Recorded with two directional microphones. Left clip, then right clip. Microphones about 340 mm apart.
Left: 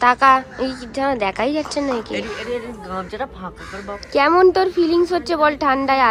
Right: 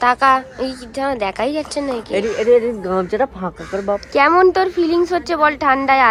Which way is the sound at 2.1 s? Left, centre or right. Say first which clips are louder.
Right 11 dB; centre.